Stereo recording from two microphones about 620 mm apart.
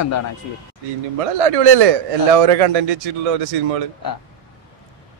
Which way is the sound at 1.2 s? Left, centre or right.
Right.